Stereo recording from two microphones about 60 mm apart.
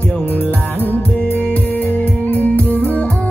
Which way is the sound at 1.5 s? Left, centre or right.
Left.